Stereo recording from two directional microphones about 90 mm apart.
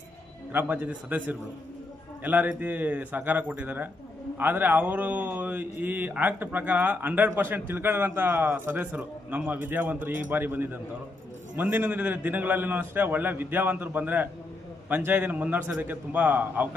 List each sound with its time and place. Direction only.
0.5 s speech: 20° right (ahead or behind)